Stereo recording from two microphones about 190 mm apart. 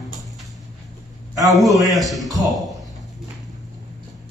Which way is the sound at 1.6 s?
15° right (ahead or behind).